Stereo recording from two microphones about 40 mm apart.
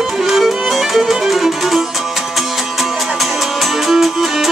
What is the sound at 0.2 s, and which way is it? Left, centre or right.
Music, centre.